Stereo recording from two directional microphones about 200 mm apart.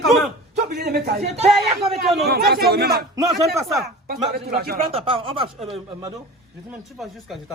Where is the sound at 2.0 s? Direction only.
Centre (ahead or behind).